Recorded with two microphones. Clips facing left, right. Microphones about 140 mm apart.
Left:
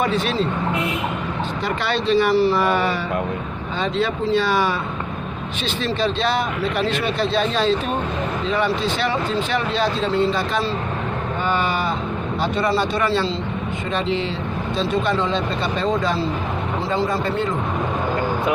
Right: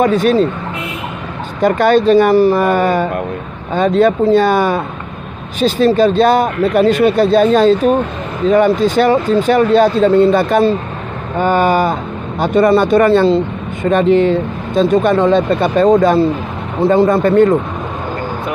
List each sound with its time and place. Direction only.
0.0 s speech: 45° right (ahead or behind)
1.6 s speech: 45° right (ahead or behind)